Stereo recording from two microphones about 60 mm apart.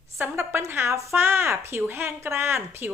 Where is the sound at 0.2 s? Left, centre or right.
Right.